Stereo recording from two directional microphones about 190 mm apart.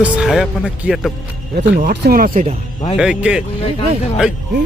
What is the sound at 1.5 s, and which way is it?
Speech, 60° right (ahead or behind).